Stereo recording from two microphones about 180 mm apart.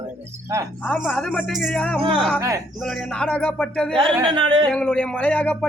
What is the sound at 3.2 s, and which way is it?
Speech, 5° left (ahead or behind).